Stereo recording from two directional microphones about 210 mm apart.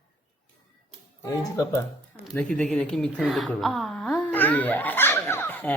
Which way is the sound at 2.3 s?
5° left (ahead or behind).